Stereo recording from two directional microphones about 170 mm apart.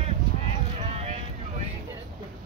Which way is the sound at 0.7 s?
40° right (ahead or behind).